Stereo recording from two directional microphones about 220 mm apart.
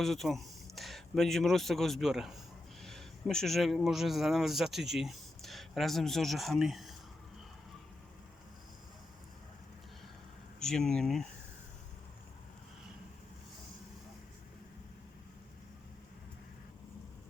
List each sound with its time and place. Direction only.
0.0 s speech: centre (ahead or behind)
10.6 s speech: 5° left (ahead or behind)